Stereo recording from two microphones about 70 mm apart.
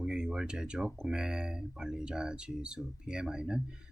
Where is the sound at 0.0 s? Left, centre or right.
Centre.